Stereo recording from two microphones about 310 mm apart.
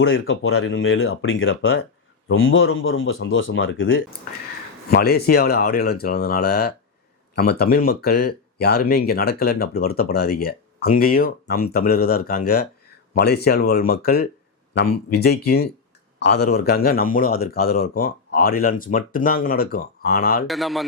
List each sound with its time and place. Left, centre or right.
0.0 s speech: left
15.4 s speech: left
20.5 s a man's voice: centre